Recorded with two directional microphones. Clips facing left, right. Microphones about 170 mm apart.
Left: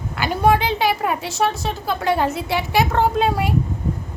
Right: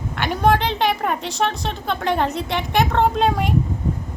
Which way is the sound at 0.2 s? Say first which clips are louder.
Left 1 dB; 5° left (ahead or behind).